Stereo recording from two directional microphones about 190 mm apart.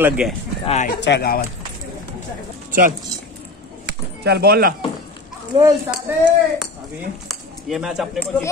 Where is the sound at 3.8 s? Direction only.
60° right (ahead or behind).